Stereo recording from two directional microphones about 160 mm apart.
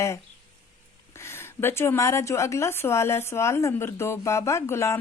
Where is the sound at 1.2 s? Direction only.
15° left (ahead or behind).